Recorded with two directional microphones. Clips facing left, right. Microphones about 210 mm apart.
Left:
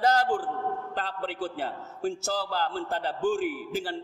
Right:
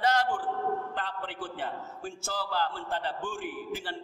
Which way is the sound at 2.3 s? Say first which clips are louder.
Left 3 dB; 40° left (ahead or behind).